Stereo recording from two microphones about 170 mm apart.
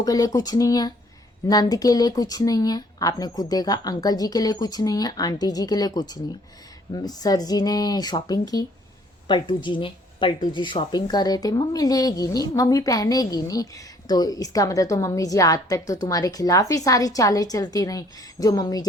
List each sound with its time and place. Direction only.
0.0 s speech: 20° left (ahead or behind)